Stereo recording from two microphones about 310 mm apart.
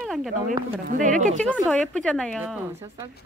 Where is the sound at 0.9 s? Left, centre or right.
Right.